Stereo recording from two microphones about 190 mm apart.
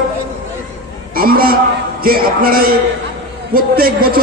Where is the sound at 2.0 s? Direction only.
50° right (ahead or behind).